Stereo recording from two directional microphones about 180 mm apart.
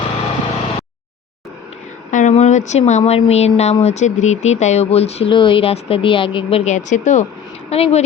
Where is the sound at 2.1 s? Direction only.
45° left (ahead or behind).